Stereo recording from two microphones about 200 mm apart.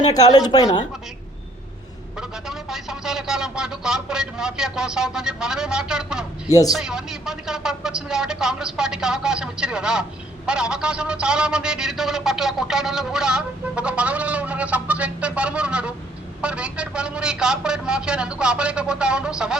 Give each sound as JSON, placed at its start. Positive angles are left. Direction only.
{"t": 0.1, "sound": "a woman's voice", "side_deg": 20}
{"t": 2.1, "sound": "speech", "side_deg": 0}
{"t": 6.5, "sound": "a man's voice", "side_deg": 15}
{"t": 6.7, "sound": "speech", "side_deg": -5}